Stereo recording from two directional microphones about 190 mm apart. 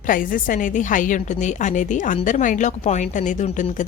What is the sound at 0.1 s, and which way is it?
A woman's voice, 45° left (ahead or behind).